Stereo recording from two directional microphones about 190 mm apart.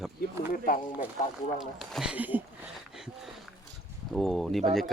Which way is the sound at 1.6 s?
Centre (ahead or behind).